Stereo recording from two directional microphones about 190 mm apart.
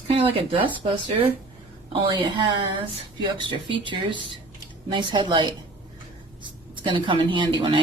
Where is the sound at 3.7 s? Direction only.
25° right (ahead or behind).